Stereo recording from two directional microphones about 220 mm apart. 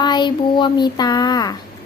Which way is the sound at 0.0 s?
20° left (ahead or behind).